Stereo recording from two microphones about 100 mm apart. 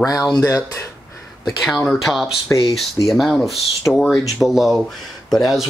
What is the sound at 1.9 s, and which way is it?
Speech, centre (ahead or behind).